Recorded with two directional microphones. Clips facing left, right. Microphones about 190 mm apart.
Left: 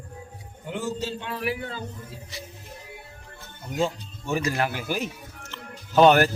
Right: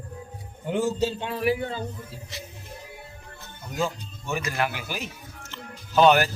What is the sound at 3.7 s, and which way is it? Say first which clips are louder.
Speech: left 2 dB; 30° left (ahead or behind).